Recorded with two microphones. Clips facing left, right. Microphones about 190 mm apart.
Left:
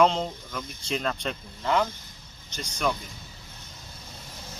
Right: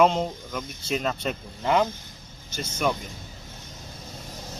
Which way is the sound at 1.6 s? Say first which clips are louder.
Right 3 dB; 20° right (ahead or behind).